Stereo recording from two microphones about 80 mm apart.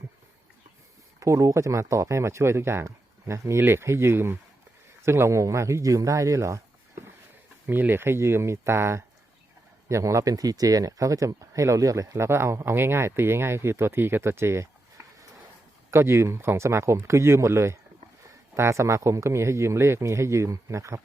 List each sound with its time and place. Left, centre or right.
1.2 s speech: right
7.7 s speech: right
12.1 s speech: right